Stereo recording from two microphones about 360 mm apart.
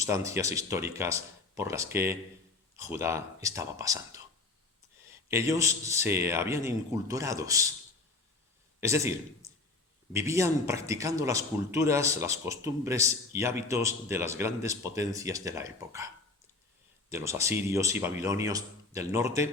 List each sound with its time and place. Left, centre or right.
0.0 s speech: centre
8.8 s a man's voice: centre
17.1 s speech: centre